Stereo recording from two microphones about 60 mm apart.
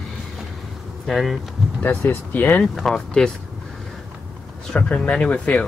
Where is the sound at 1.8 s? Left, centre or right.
Left.